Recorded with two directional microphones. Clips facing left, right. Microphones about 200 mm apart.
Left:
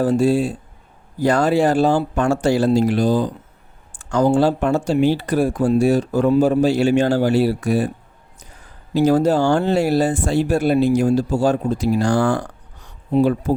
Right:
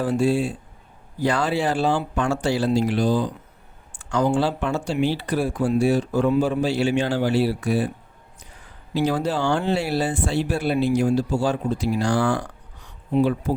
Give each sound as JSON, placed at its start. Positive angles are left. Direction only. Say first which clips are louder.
{"t": 0.0, "sound": "speech", "louder": "left 4 dB", "side_deg": 40}
{"t": 8.9, "sound": "speech", "louder": "left 7 dB", "side_deg": 45}